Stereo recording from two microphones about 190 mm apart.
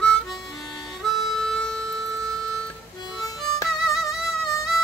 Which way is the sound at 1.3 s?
Centre (ahead or behind).